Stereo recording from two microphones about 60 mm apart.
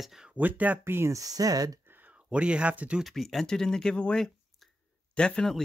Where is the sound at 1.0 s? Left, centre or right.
Right.